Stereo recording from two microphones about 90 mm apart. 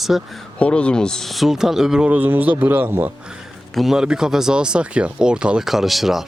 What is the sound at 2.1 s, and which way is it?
Speech, 20° right (ahead or behind).